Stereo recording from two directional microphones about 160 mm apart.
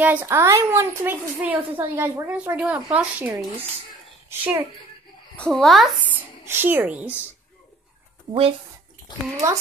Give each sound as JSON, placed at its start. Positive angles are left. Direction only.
{"t": 0.0, "sound": "a woman's voice", "side_deg": -10}
{"t": 5.3, "sound": "speech", "side_deg": 5}
{"t": 6.1, "sound": "a child's voice", "side_deg": -15}
{"t": 8.3, "sound": "speech", "side_deg": -35}
{"t": 9.1, "sound": "a child's voice", "side_deg": 30}